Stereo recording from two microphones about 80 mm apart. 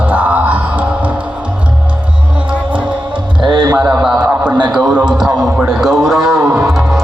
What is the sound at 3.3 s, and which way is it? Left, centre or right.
Speech, right.